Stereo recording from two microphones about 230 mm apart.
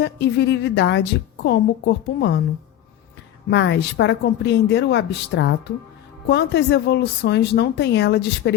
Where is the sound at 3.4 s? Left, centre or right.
Left.